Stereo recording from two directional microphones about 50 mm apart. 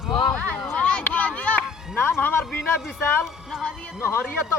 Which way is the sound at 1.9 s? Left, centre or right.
Left.